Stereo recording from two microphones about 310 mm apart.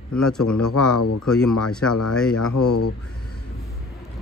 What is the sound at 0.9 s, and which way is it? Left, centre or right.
Speech, left.